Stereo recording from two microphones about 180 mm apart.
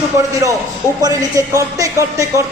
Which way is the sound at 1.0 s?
20° right (ahead or behind).